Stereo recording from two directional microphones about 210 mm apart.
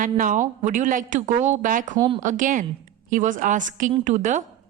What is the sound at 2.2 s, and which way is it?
A woman's voice, 40° right (ahead or behind).